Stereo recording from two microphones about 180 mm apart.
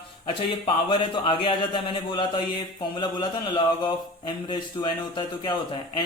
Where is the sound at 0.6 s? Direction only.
25° left (ahead or behind).